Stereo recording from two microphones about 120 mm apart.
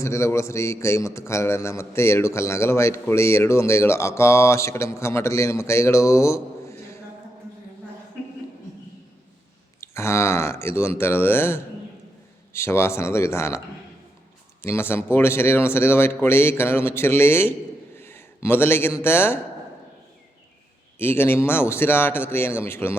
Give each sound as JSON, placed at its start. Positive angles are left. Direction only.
{"t": 0.0, "sound": "a man's voice", "side_deg": 25}
{"t": 9.8, "sound": "a man's voice", "side_deg": 20}
{"t": 14.6, "sound": "a man's voice", "side_deg": 20}
{"t": 17.9, "sound": "a sound", "side_deg": 20}
{"t": 19.0, "sound": "a man's voice", "side_deg": 20}
{"t": 21.0, "sound": "a man's voice", "side_deg": 20}